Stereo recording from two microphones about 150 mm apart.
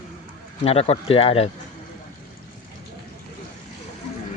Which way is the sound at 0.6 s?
45° left (ahead or behind).